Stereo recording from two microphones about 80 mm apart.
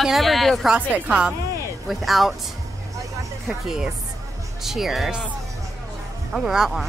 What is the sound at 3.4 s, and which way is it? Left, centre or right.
Speech, centre.